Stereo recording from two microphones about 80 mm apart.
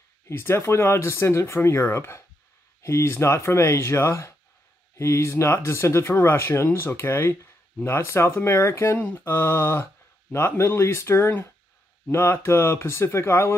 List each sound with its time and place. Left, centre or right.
0.3 s speech: left
8.9 s speech: left